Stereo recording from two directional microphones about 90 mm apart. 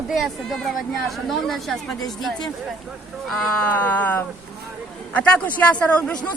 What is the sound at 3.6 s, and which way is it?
Speech, 20° left (ahead or behind).